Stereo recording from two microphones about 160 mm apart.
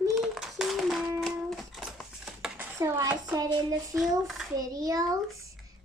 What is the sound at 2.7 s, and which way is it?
A child's voice, 20° right (ahead or behind).